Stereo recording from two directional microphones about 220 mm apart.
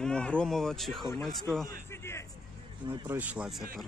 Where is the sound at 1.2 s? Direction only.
Centre (ahead or behind).